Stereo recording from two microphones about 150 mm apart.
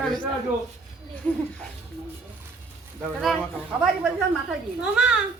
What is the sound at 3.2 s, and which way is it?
A woman's voice, centre (ahead or behind).